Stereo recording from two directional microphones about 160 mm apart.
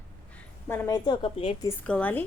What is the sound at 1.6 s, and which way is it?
Speech, 10° left (ahead or behind).